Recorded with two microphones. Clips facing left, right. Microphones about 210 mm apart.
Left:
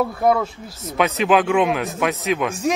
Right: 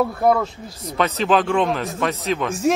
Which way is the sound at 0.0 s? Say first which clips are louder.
Even; centre (ahead or behind).